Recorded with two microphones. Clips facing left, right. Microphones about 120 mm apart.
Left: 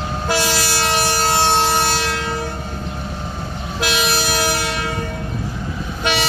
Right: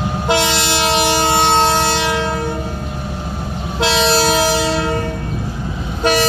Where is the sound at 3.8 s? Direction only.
30° right (ahead or behind).